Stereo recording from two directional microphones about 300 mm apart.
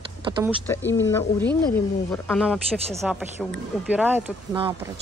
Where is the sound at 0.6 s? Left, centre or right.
Centre.